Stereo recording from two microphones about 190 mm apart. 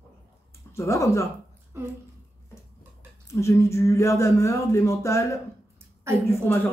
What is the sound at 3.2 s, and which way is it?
Speech, 15° left (ahead or behind).